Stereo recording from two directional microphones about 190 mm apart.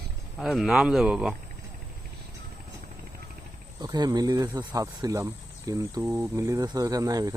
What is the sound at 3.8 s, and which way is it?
Speech, 20° right (ahead or behind).